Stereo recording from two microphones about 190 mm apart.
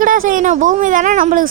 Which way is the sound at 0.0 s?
45° right (ahead or behind).